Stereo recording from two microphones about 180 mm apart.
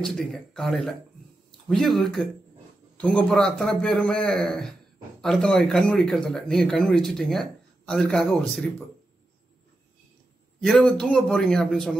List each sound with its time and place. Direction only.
0.0 s speech: 5° left (ahead or behind)
10.6 s speech: centre (ahead or behind)